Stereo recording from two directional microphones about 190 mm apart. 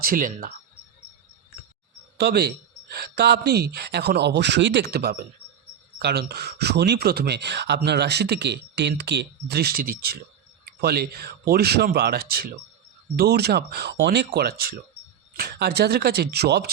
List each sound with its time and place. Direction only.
0.0 s speech: 50° right (ahead or behind)
2.1 s speech: 55° right (ahead or behind)
14.3 s speech: 55° right (ahead or behind)